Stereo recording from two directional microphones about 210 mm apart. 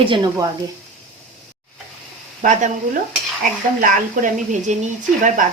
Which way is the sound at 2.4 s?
35° right (ahead or behind).